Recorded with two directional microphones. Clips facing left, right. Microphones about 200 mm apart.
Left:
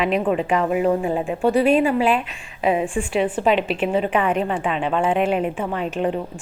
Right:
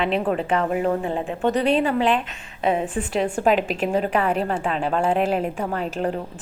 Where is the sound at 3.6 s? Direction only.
40° right (ahead or behind).